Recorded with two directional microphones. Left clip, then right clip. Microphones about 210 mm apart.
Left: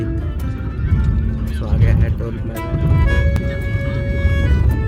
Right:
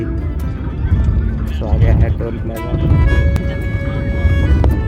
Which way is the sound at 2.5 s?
Centre (ahead or behind).